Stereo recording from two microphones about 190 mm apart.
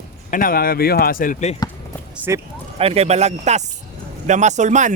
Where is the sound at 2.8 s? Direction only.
30° right (ahead or behind).